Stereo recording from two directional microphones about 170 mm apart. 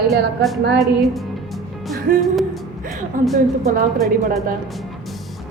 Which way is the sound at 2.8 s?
50° right (ahead or behind).